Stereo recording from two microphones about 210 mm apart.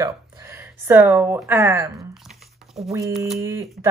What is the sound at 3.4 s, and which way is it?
Speech, 10° right (ahead or behind).